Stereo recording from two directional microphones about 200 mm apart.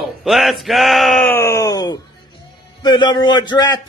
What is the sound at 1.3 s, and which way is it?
Speech, 15° left (ahead or behind).